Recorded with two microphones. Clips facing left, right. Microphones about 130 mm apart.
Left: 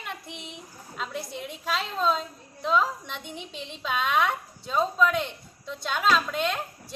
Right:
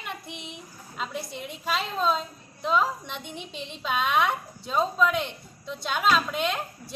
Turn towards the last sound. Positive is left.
turn(degrees=-5)  # may be behind; listen again after turning